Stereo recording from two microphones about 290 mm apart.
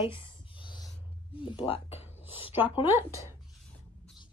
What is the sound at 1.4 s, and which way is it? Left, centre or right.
Speech, centre.